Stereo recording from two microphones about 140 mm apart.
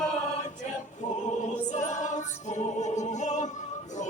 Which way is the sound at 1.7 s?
60° left (ahead or behind).